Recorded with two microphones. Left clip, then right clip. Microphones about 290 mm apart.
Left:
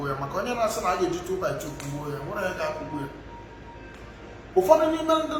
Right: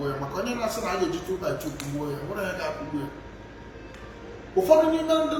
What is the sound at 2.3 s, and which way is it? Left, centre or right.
Speech, centre.